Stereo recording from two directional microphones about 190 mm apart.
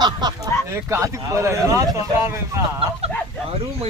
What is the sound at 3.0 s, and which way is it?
Speech, 30° right (ahead or behind).